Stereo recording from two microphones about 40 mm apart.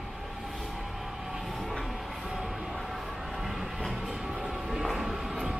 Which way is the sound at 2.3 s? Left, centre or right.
Centre.